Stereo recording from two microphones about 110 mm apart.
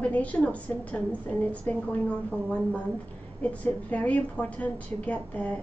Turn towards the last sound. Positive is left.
turn(degrees=10)  # may be behind; listen again after turning